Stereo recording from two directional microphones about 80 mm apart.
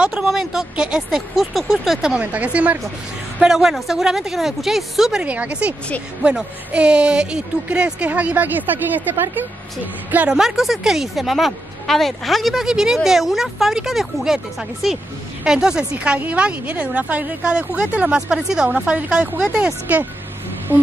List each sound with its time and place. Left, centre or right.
0.0 s a woman's voice: centre
3.3 s a woman's voice: centre
5.2 s a woman's voice: centre
10.1 s a woman's voice: centre
18.8 s a woman's voice: centre
19.4 s a woman's voice: centre
20.7 s a sound: right